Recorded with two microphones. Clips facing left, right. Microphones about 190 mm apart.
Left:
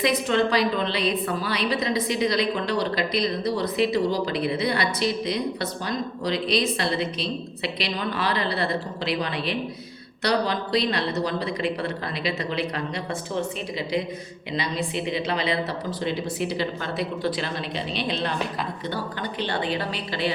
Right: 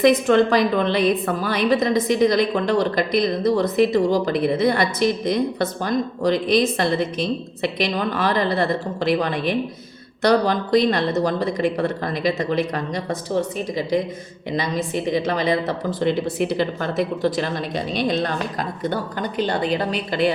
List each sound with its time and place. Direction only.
0.0 s a woman's voice: 50° right (ahead or behind)
14.5 s a woman's voice: 45° right (ahead or behind)